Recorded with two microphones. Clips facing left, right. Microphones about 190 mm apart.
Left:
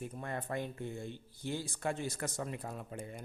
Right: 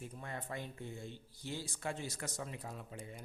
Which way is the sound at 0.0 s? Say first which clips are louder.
Left 5 dB; 55° left (ahead or behind).